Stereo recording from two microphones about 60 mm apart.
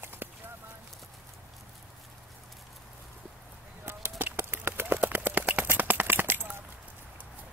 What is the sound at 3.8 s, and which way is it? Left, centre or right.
Horse, right.